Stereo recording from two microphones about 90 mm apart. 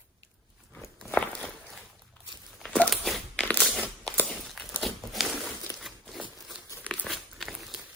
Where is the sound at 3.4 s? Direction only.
15° left (ahead or behind).